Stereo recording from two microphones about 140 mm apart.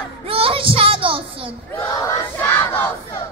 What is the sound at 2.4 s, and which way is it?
Crowd, 15° left (ahead or behind).